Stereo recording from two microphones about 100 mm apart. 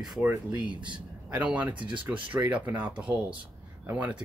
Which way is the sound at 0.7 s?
55° right (ahead or behind).